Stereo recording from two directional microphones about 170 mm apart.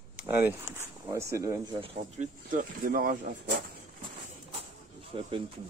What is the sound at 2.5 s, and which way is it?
Speech, 55° right (ahead or behind).